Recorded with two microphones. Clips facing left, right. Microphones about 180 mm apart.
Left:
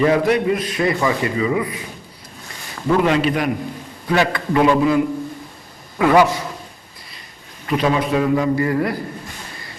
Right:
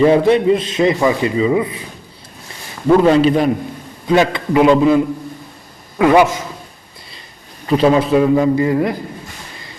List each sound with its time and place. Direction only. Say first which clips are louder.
0.0 s speech: right 5 dB; 25° right (ahead or behind)
3.0 s a man's voice: right 5 dB; 30° right (ahead or behind)
4.0 s speech: right 4 dB; 20° right (ahead or behind)
7.7 s speech: right 6 dB; 30° right (ahead or behind)